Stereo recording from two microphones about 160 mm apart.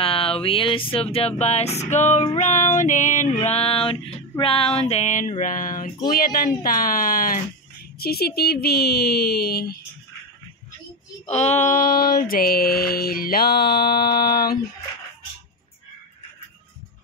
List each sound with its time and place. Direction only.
0.0 s speech: 35° left (ahead or behind)
3.3 s speech: 40° left (ahead or behind); by 9.8 s 75° left (ahead or behind)
11.2 s speech: 45° left (ahead or behind); by 14.6 s 70° left (ahead or behind)